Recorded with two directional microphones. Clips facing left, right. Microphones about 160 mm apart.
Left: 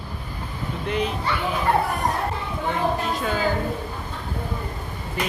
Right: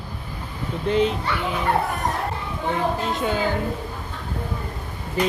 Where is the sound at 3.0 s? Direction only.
20° right (ahead or behind).